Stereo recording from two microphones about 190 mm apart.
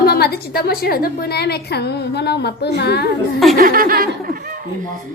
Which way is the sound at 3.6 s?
50° right (ahead or behind).